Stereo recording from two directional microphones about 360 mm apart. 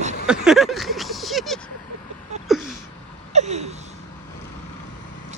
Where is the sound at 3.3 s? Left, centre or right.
Centre.